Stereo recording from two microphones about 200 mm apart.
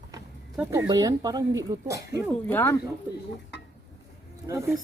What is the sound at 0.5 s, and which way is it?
Speech, 10° right (ahead or behind).